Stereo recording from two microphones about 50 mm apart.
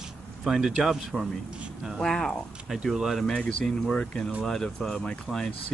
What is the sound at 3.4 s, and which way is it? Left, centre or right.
Speech, centre.